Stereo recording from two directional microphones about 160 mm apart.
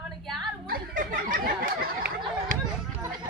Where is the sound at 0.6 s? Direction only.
65° right (ahead or behind).